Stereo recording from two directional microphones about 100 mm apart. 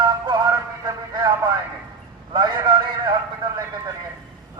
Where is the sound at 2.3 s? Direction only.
50° right (ahead or behind).